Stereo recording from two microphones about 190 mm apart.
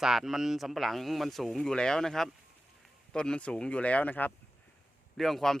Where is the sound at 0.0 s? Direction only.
Centre (ahead or behind).